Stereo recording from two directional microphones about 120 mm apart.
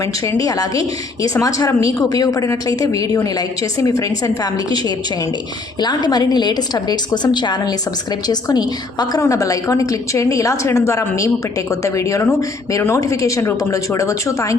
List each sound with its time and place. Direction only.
0.0 s a woman's voice: 25° left (ahead or behind)